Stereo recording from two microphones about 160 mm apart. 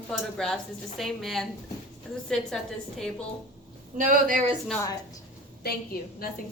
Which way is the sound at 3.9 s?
55° right (ahead or behind).